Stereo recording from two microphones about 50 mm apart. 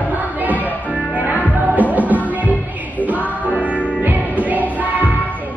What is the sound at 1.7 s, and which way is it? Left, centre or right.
Music, right.